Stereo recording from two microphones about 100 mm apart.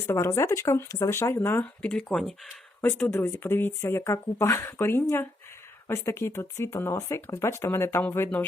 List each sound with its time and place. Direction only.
0.0 s speech: 25° left (ahead or behind)
1.1 s speech: 25° left (ahead or behind)
1.9 s speech: 5° left (ahead or behind)
3.0 s speech: 25° left (ahead or behind)